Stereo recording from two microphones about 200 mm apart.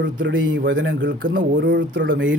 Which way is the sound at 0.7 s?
70° right (ahead or behind).